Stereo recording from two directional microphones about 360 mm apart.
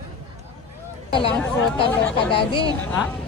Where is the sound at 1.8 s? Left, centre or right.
Centre.